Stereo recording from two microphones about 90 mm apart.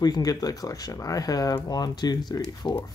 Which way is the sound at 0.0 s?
45° left (ahead or behind).